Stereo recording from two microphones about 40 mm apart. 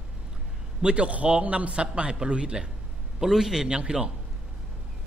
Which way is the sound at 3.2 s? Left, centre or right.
Centre.